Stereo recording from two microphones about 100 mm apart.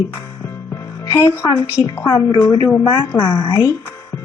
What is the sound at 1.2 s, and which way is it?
Speech, 25° left (ahead or behind).